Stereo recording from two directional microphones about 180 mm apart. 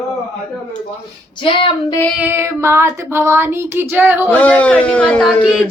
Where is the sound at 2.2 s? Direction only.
15° right (ahead or behind).